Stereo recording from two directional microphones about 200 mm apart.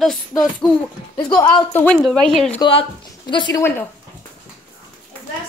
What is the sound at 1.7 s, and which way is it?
Speech, 5° left (ahead or behind).